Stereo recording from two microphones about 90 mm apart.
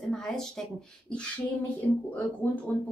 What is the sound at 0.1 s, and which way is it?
A woman's voice, 5° left (ahead or behind).